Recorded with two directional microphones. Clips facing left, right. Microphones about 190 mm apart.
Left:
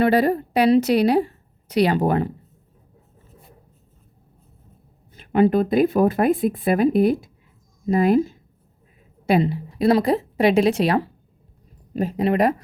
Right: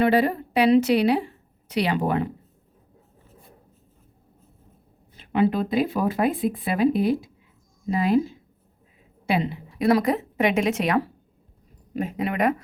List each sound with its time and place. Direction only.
0.0 s a woman's voice: 40° left (ahead or behind)
5.1 s a woman's voice: 50° left (ahead or behind)